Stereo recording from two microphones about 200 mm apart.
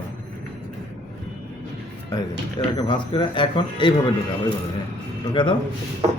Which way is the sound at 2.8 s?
25° left (ahead or behind).